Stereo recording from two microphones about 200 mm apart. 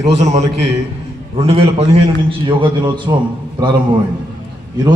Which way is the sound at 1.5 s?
30° right (ahead or behind).